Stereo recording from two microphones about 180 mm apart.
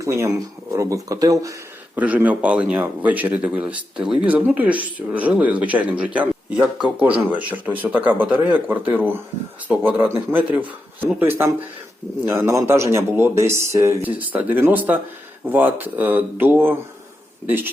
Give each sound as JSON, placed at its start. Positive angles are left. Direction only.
{"t": 0.0, "sound": "speech", "side_deg": -15}
{"t": 2.0, "sound": "speech", "side_deg": -10}